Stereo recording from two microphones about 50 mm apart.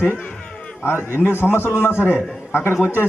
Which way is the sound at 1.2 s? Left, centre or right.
Left.